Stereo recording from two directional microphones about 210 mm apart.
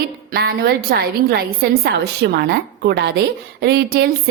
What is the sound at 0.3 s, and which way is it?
A woman's voice, 50° right (ahead or behind).